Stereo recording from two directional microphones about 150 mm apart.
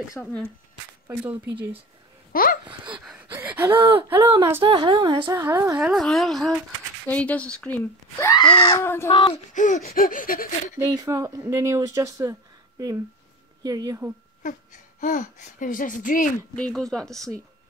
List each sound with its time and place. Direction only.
0.2 s speech: 10° left (ahead or behind)
1.0 s speech: 10° right (ahead or behind)
2.3 s speech: 70° left (ahead or behind)
2.9 s gasp: 10° right (ahead or behind)
3.7 s a woman's voice: 35° right (ahead or behind)
5.2 s speech: 15° right (ahead or behind)
5.8 s speech: centre (ahead or behind)
8.2 s speech: 25° left (ahead or behind)
8.5 s speech: 35° left (ahead or behind)
8.7 s speech: 15° left (ahead or behind)
9.5 s gasp: 60° left (ahead or behind)
10.8 s speech: 20° right (ahead or behind)
14.4 s speech: 55° left (ahead or behind)
16.5 s speech: 5° left (ahead or behind)